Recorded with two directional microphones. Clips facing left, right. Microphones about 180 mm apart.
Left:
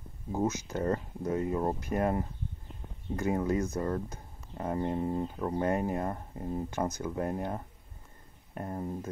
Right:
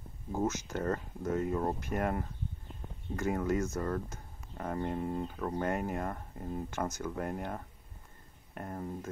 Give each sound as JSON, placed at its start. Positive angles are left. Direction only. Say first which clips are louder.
{"t": 0.3, "sound": "speech", "louder": "left 2 dB", "side_deg": 15}
{"t": 3.2, "sound": "speech", "louder": "left 2 dB", "side_deg": 15}